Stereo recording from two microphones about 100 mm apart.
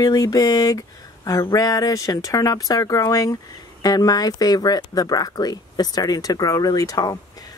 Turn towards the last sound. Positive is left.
turn(degrees=40)  # may be behind; listen again after turning